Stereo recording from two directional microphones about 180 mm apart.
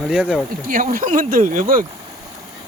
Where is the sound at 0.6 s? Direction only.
50° right (ahead or behind).